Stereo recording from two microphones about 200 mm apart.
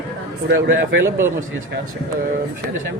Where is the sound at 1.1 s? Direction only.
15° right (ahead or behind).